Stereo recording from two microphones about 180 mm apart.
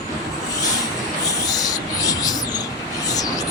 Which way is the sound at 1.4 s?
20° left (ahead or behind).